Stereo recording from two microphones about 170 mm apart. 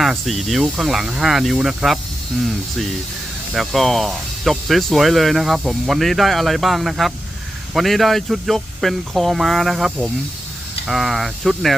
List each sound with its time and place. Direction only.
0.0 s speech: centre (ahead or behind)
3.5 s speech: centre (ahead or behind)